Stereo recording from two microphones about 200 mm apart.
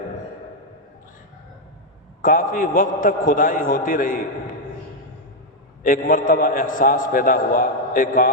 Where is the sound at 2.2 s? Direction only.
45° left (ahead or behind).